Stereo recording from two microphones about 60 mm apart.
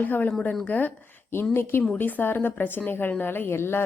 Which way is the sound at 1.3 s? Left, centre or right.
Left.